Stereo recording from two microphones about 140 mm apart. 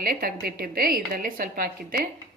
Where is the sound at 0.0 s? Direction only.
90° right.